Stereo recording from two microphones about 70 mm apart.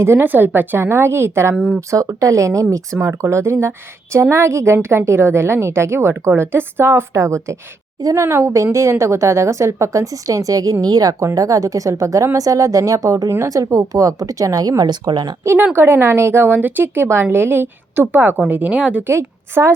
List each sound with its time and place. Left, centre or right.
0.0 s a woman's voice: right
1.5 s speech: centre
1.9 s a woman's voice: right
11.3 s a woman's voice: right
15.7 s a woman's voice: right; by 19.0 s centre
19.0 s a woman's voice: right